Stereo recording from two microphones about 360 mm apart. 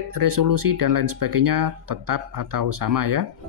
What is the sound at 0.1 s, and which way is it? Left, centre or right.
Speech, right.